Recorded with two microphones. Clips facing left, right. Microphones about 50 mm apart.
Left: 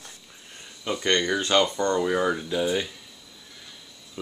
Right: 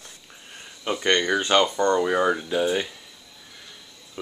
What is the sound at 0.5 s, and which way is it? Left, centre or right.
Speech, centre.